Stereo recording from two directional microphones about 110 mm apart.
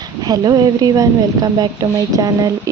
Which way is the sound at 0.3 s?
35° right (ahead or behind).